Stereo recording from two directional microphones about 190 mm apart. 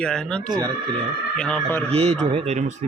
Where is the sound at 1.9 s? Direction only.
35° right (ahead or behind).